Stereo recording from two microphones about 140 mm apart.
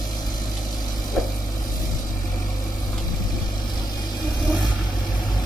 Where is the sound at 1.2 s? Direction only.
Centre (ahead or behind).